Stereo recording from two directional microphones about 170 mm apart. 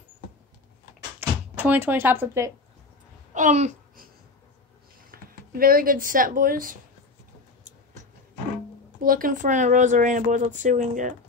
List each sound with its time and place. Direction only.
1.2 s a sound: 15° right (ahead or behind)
1.6 s speech: 10° right (ahead or behind)
3.3 s speech: 45° right (ahead or behind)
5.1 s speech: 60° right (ahead or behind)
9.0 s speech: 55° right (ahead or behind)